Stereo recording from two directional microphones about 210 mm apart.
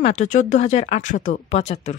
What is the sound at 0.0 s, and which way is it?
Speech, 35° left (ahead or behind).